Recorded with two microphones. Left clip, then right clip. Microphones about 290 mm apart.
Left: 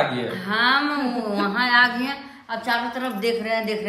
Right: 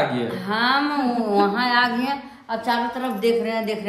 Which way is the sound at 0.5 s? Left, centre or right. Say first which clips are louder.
Left 1 dB; centre.